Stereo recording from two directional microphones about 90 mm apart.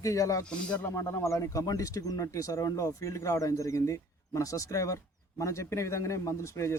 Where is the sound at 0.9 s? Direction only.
35° left (ahead or behind).